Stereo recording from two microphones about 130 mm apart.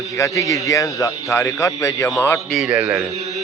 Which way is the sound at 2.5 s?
5° right (ahead or behind).